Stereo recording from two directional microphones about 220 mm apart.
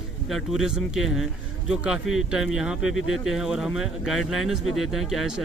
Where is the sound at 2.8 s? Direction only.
60° left (ahead or behind).